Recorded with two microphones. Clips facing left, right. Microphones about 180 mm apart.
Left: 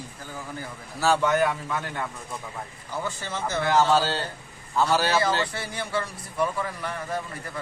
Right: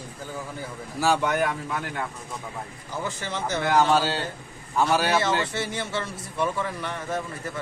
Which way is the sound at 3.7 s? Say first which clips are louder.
Even; 15° right (ahead or behind).